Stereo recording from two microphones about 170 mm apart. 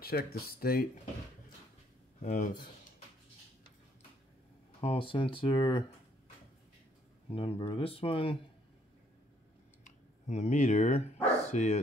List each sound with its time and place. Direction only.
0.0 s speech: 65° left (ahead or behind)
2.2 s speech: 45° left (ahead or behind)
4.7 s speech: 30° left (ahead or behind)
7.2 s speech: 30° left (ahead or behind)
9.8 s speech: 45° left (ahead or behind)